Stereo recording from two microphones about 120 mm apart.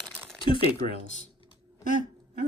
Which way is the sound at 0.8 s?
90° right.